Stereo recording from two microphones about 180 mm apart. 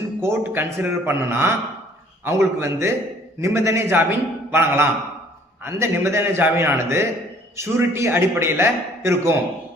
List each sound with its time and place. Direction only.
0.2 s a man's voice: 15° right (ahead or behind)